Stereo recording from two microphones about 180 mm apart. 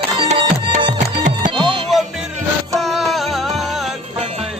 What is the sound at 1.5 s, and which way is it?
Music, 25° right (ahead or behind).